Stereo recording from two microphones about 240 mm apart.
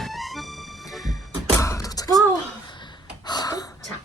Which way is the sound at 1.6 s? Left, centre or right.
Centre.